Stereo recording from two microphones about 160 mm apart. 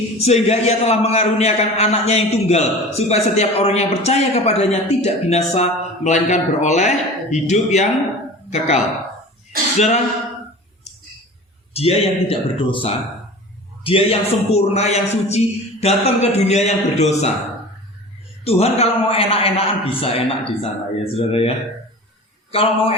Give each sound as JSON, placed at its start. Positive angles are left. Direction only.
{"t": 0.2, "sound": "a man's voice", "side_deg": 45}
{"t": 11.7, "sound": "a man's voice", "side_deg": 40}
{"t": 18.4, "sound": "a man's voice", "side_deg": 40}
{"t": 22.5, "sound": "a man's voice", "side_deg": 35}